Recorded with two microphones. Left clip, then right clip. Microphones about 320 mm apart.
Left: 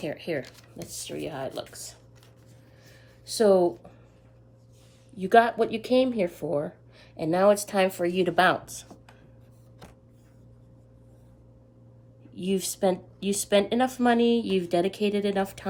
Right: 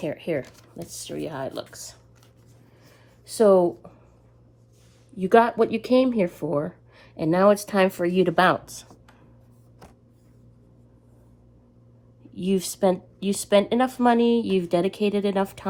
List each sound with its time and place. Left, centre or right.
0.4 s speech: centre
3.2 s speech: centre
5.1 s speech: centre
12.3 s speech: centre